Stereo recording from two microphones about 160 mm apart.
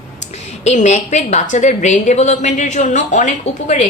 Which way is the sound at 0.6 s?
45° left (ahead or behind).